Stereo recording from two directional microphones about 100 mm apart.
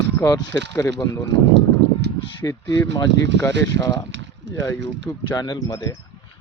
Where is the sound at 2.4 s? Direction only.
30° left (ahead or behind).